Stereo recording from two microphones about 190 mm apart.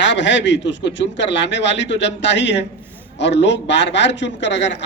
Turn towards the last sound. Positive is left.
turn(degrees=70)  # may be behind; listen again after turning